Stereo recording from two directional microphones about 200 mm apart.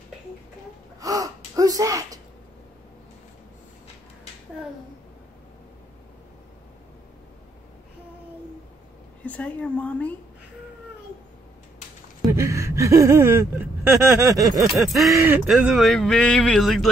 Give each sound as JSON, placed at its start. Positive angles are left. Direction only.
{"t": 1.0, "sound": "gasp", "side_deg": -15}
{"t": 9.2, "sound": "a woman's voice", "side_deg": 5}
{"t": 12.3, "sound": "speech", "side_deg": -15}
{"t": 14.7, "sound": "speech", "side_deg": 0}